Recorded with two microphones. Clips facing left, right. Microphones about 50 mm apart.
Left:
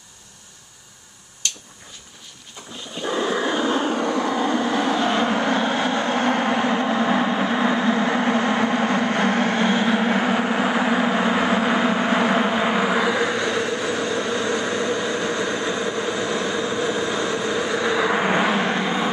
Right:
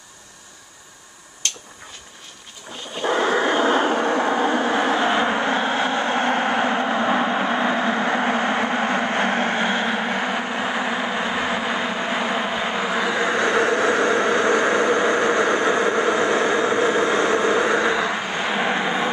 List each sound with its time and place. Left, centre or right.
3.0 s vehicle: right; by 9.8 s centre
9.8 s vehicle: centre
13.3 s vehicle: right
18.4 s vehicle: centre
18.7 s vehicle: centre